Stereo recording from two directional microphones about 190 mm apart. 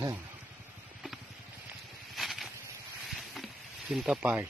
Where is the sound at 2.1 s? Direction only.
Centre (ahead or behind).